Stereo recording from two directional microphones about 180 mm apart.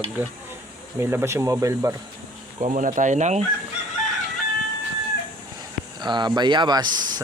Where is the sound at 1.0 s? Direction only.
15° right (ahead or behind).